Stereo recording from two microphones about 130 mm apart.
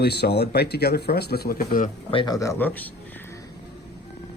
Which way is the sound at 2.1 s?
30° left (ahead or behind).